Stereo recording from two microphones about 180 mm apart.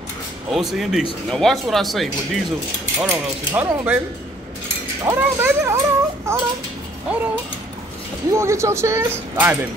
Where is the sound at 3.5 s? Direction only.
10° right (ahead or behind).